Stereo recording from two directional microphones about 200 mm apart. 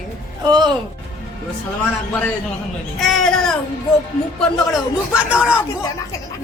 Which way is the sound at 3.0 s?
Centre (ahead or behind).